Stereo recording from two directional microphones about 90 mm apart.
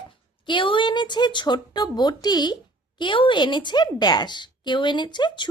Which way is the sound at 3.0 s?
65° left (ahead or behind).